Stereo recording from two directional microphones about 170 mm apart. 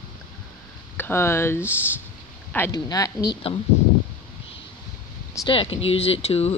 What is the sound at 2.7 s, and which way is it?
Speech, 20° left (ahead or behind).